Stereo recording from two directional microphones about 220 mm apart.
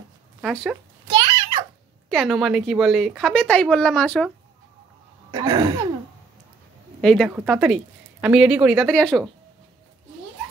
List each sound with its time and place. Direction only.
0.4 s speech: centre (ahead or behind)
1.0 s a sound: 20° right (ahead or behind)
2.0 s speech: centre (ahead or behind)
5.3 s throat clearing: 20° right (ahead or behind)
7.0 s speech: centre (ahead or behind)